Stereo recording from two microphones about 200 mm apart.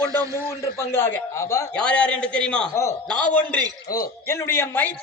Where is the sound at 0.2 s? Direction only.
15° right (ahead or behind).